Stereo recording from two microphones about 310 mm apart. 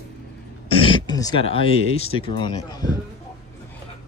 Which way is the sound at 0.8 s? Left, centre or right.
Centre.